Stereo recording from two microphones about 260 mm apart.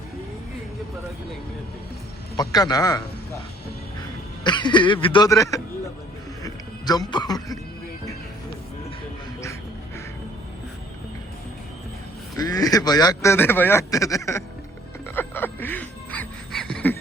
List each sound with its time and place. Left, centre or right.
2.3 s speech: centre
4.4 s speech: centre
12.4 s speech: centre
15.1 s music: centre